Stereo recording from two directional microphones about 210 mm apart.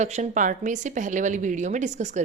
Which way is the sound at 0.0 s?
35° right (ahead or behind).